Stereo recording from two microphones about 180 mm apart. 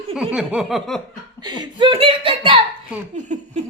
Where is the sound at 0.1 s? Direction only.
5° right (ahead or behind).